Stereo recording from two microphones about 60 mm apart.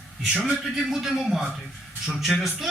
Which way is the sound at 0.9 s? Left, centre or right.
Centre.